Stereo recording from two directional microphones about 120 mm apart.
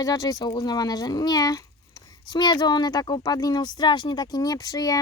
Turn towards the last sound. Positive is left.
turn(degrees=30)  # may be behind; listen again after turning